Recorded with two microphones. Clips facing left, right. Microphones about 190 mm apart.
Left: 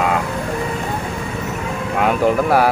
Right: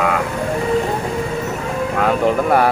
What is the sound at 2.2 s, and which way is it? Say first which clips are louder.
Speech: left 1 dB; 5° left (ahead or behind).